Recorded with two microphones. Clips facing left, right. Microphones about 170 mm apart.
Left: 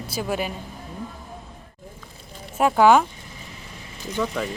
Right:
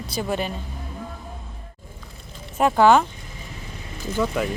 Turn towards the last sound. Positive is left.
turn(degrees=-5)  # may be behind; listen again after turning